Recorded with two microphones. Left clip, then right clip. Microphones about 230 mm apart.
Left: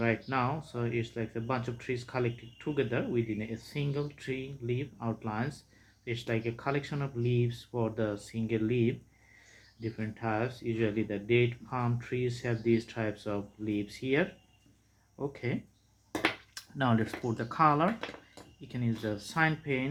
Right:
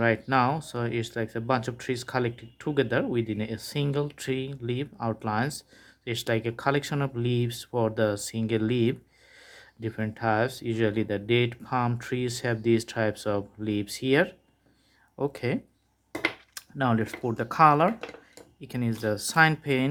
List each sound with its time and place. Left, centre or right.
0.0 s speech: right
16.6 s speech: right